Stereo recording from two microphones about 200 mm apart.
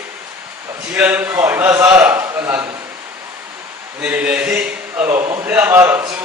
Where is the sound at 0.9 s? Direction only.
10° right (ahead or behind).